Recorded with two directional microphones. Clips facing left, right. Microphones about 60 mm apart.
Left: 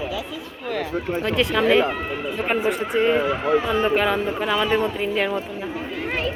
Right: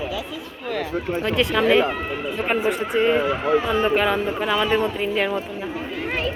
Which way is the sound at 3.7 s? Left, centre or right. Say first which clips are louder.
Even; right.